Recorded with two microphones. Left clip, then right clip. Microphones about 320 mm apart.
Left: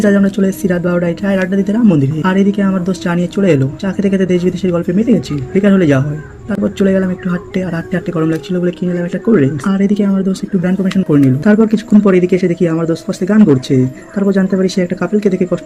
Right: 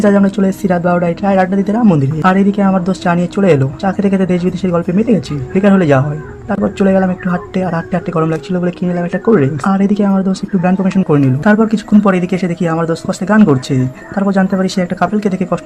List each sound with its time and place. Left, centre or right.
0.0 s speech: centre